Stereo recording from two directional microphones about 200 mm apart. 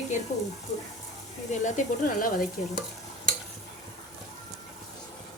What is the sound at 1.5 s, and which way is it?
Speech, 40° left (ahead or behind).